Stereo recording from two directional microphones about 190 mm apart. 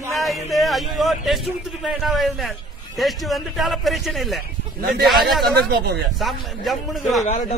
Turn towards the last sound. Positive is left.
turn(degrees=0)  # may be behind; listen again after turning